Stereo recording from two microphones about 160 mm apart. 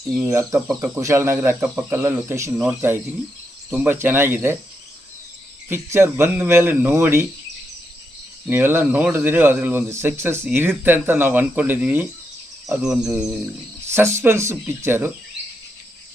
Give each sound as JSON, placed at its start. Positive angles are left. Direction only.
{"t": 0.2, "sound": "speech", "side_deg": -15}
{"t": 5.6, "sound": "speech", "side_deg": -15}
{"t": 8.4, "sound": "speech", "side_deg": -15}
{"t": 13.9, "sound": "speech", "side_deg": -15}